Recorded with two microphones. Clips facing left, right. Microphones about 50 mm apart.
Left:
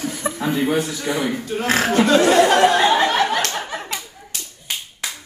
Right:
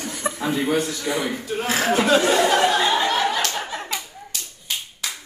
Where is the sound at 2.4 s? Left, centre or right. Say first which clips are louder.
Left 4 dB; left.